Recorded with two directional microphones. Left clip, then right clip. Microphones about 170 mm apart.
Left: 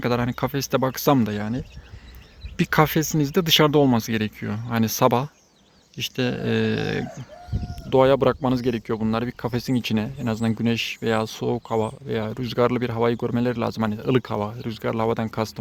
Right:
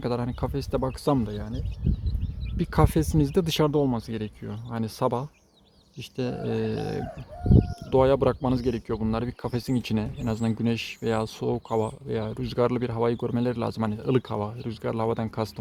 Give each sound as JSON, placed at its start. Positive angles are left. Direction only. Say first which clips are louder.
{"t": 0.0, "sound": "speech", "louder": "left 6 dB", "side_deg": 5}
{"t": 1.3, "sound": "speech", "louder": "left 7 dB", "side_deg": 30}
{"t": 2.6, "sound": "speech", "louder": "left 5 dB", "side_deg": 0}
{"t": 3.7, "sound": "speech", "louder": "left 6 dB", "side_deg": 15}